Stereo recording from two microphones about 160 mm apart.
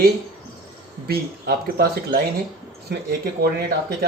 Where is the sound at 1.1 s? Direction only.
75° right (ahead or behind).